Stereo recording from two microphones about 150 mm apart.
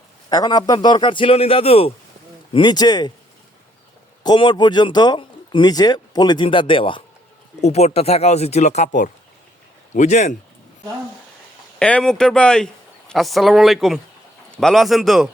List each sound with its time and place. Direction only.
0.3 s a man's voice: 25° left (ahead or behind)
2.5 s speech: 30° left (ahead or behind)
4.2 s speech: 30° left (ahead or behind)
7.6 s speech: 45° left (ahead or behind)
11.8 s speech: 5° left (ahead or behind)